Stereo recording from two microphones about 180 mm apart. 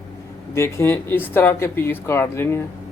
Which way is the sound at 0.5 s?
15° left (ahead or behind).